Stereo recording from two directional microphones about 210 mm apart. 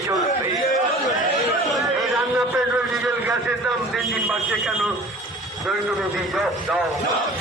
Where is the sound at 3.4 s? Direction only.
Centre (ahead or behind).